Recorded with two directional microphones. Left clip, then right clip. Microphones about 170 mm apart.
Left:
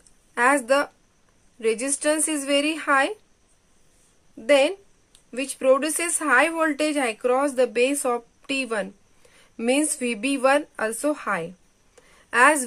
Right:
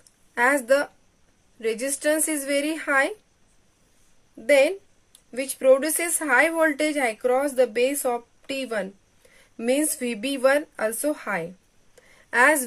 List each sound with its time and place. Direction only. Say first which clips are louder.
0.3 s speech: even; 15° left (ahead or behind)
4.5 s a woman's voice: even; 15° left (ahead or behind)